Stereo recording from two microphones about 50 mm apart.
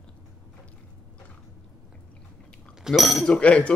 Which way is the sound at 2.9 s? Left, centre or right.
Centre.